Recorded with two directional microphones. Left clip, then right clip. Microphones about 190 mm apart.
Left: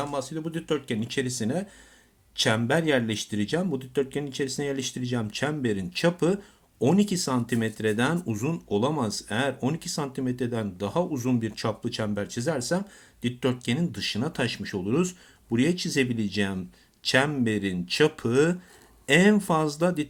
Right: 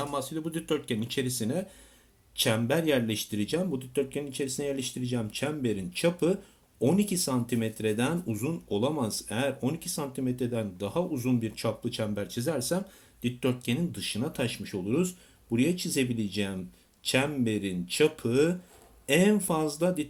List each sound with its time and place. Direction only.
0.0 s speech: 15° left (ahead or behind)